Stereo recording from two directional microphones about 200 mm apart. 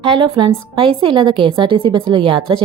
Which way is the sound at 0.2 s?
25° right (ahead or behind).